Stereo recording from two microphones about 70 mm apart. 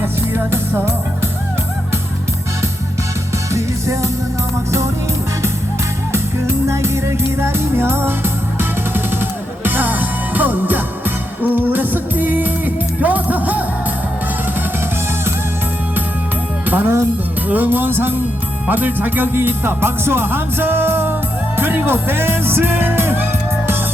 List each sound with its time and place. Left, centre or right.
0.0 s music: right
3.5 s music: right
6.7 s music: right
9.6 s music: right
16.6 s speech: right
17.5 s music: right